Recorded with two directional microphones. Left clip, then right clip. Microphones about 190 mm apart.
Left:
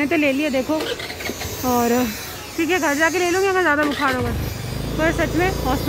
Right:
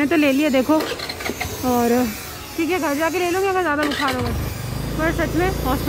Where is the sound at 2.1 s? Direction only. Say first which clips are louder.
Left 1 dB; 55° right (ahead or behind).